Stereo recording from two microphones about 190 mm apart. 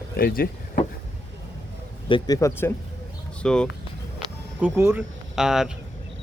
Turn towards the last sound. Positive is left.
turn(degrees=-5)  # may be behind; listen again after turning